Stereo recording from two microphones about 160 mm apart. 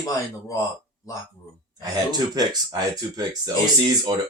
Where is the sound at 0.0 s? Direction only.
20° left (ahead or behind).